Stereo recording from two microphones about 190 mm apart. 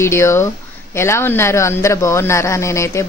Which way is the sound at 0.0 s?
15° left (ahead or behind).